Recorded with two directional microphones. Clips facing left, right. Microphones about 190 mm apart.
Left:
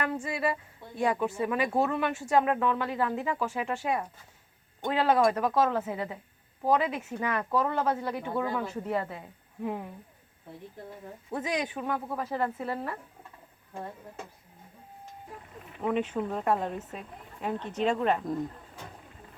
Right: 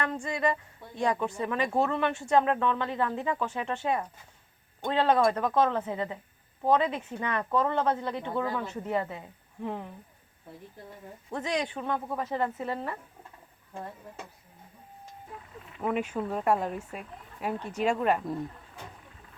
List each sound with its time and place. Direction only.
0.0 s a woman's voice: 10° left (ahead or behind)
11.3 s a woman's voice: 10° left (ahead or behind)
15.9 s speech: 5° right (ahead or behind)